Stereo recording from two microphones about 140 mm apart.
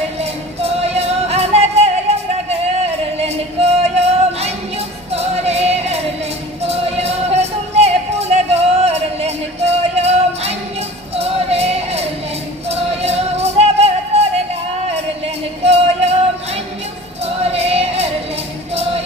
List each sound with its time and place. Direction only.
0.2 s music: 50° right (ahead or behind)
17.2 s music: 45° right (ahead or behind)